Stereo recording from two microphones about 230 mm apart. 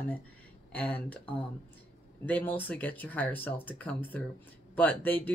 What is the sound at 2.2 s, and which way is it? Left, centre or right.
Speech, centre.